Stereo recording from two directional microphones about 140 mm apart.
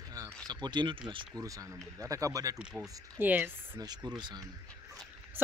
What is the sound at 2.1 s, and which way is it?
Speech, 25° right (ahead or behind).